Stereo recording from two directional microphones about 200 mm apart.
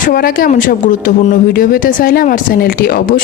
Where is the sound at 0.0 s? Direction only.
45° left (ahead or behind).